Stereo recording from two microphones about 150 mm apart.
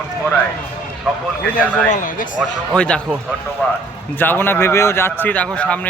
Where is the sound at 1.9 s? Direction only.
60° left (ahead or behind).